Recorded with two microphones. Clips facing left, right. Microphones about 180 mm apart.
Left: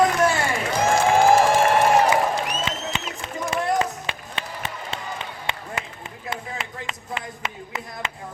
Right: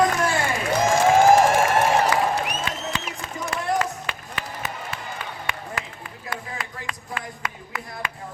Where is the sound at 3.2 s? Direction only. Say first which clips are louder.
Left 3 dB; 20° left (ahead or behind).